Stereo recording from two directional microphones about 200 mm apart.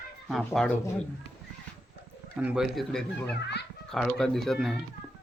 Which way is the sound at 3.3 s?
55° left (ahead or behind).